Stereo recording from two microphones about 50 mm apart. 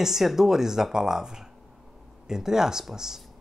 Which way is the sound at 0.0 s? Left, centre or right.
Centre.